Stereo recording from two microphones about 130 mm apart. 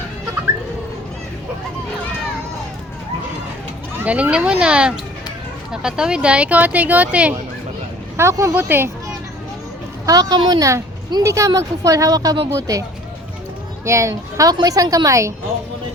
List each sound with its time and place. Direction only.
4.0 s speech: 10° right (ahead or behind)
8.1 s a woman's voice: 20° right (ahead or behind)
10.1 s a woman's voice: 30° right (ahead or behind)
13.8 s a woman's voice: 20° right (ahead or behind)